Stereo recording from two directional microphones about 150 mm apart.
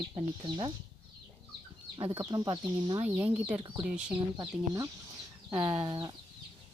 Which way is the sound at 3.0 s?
10° right (ahead or behind).